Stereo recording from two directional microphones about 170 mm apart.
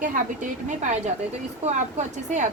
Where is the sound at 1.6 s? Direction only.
45° right (ahead or behind).